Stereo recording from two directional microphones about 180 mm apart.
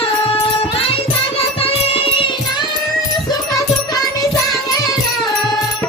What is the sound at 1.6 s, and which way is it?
Music, 30° left (ahead or behind).